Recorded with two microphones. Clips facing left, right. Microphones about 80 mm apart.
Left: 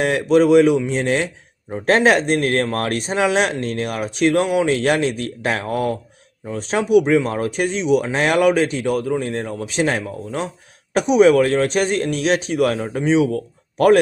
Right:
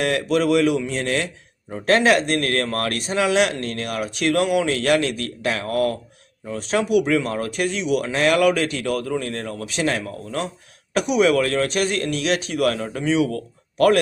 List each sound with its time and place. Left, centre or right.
0.0 s speech: left
5.6 s speech: centre